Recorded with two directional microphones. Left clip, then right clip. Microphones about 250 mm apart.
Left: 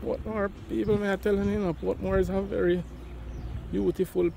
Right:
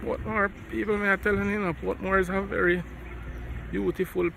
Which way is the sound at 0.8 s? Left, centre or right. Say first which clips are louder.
Right 2 dB; left.